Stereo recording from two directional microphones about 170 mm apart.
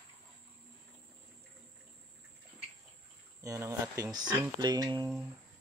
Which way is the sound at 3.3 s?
20° right (ahead or behind).